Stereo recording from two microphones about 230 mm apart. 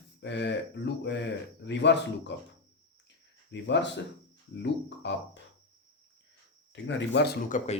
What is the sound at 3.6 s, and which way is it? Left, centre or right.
A man's voice, left.